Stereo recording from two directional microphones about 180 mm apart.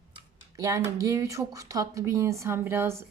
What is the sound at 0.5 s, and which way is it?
Speech, 20° right (ahead or behind).